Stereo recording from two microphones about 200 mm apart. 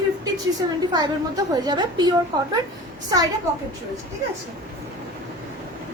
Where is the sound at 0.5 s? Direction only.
20° right (ahead or behind).